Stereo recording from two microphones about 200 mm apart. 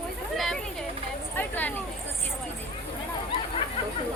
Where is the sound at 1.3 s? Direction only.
10° left (ahead or behind).